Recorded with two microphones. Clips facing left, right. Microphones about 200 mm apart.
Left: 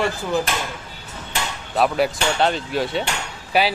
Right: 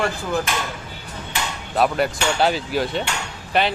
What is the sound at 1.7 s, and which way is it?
Speech, centre (ahead or behind).